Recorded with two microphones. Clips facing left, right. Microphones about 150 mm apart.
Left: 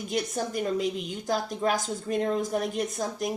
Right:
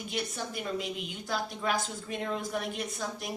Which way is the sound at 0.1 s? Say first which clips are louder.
Left 7 dB; 45° left (ahead or behind).